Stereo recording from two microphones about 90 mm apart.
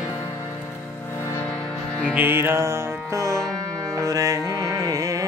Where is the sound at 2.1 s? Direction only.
25° right (ahead or behind).